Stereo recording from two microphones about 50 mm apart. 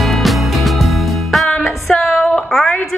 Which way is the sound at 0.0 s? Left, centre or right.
Centre.